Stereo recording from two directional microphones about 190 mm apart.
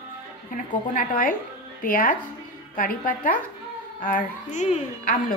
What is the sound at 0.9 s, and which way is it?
A woman's voice, 45° left (ahead or behind).